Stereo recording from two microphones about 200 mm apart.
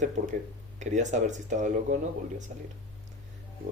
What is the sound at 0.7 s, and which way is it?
Speech, 35° right (ahead or behind).